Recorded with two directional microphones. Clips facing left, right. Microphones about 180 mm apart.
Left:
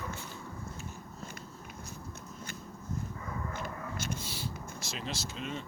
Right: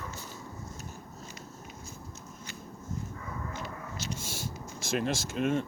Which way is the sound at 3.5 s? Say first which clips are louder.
Left 1 dB; 50° left (ahead or behind).